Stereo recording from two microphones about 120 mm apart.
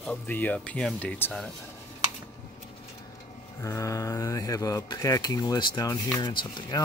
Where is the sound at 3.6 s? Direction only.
25° left (ahead or behind).